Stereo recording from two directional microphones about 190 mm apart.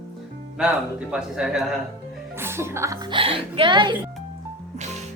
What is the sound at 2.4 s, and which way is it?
A woman's voice, 15° right (ahead or behind).